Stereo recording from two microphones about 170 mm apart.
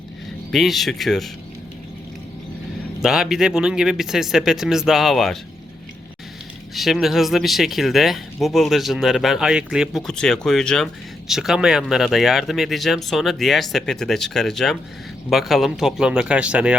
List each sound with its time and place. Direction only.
0.5 s speech: centre (ahead or behind)
3.0 s speech: centre (ahead or behind)
6.7 s speech: centre (ahead or behind)